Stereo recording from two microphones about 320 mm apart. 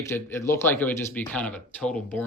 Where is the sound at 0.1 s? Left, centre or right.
Centre.